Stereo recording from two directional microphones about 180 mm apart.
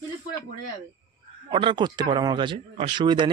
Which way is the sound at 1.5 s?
25° right (ahead or behind).